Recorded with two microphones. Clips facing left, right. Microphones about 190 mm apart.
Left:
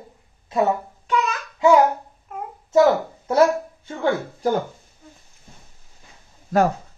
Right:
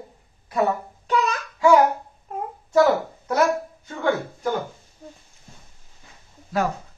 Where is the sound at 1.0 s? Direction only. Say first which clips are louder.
Right 1 dB; 35° right (ahead or behind).